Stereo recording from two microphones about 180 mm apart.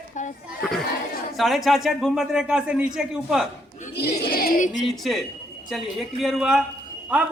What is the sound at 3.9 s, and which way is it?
Speech, 65° left (ahead or behind).